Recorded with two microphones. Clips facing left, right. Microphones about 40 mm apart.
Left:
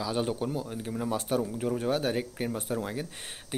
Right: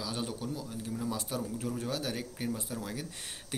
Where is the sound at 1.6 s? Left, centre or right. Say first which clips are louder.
Left 6 dB; left.